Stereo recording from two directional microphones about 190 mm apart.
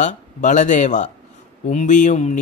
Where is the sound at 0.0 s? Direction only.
40° left (ahead or behind).